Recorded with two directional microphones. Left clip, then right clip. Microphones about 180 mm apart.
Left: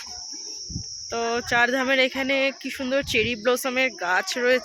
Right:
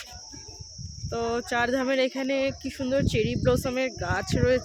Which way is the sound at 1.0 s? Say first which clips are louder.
Left 3 dB; 5° right (ahead or behind).